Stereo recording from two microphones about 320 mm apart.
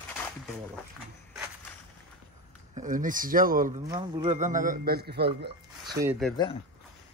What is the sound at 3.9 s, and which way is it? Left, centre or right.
Speech, centre.